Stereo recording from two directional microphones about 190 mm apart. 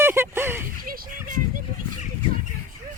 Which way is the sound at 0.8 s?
45° right (ahead or behind).